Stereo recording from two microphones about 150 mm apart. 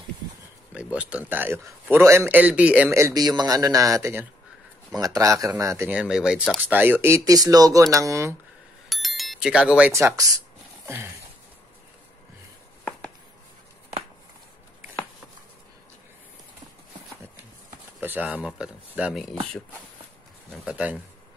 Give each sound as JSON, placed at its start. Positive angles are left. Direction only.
{"t": 0.9, "sound": "a man's voice", "side_deg": -10}
{"t": 2.9, "sound": "speech", "side_deg": -20}
{"t": 5.9, "sound": "speech", "side_deg": -5}
{"t": 8.8, "sound": "bicycle bell", "side_deg": 0}
{"t": 9.9, "sound": "speech", "side_deg": -20}
{"t": 18.0, "sound": "a man's voice", "side_deg": -10}
{"t": 20.5, "sound": "a man's voice", "side_deg": -10}